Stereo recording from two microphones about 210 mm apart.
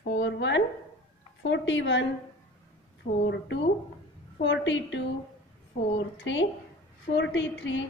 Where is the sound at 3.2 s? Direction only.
60° left (ahead or behind).